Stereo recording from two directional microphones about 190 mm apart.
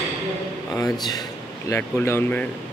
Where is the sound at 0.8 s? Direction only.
20° left (ahead or behind).